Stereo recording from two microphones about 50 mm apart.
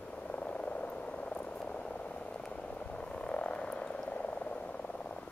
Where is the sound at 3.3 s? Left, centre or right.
Left.